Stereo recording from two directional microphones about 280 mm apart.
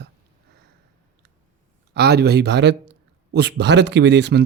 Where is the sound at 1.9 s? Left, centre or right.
Right.